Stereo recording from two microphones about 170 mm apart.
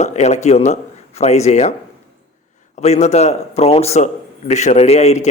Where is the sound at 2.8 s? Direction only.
40° left (ahead or behind).